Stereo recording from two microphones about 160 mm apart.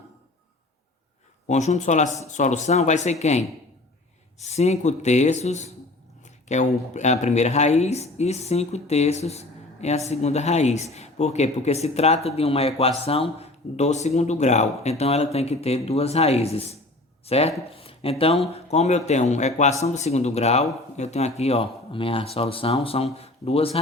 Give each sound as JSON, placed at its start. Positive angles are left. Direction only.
{"t": 1.5, "sound": "speech", "side_deg": 45}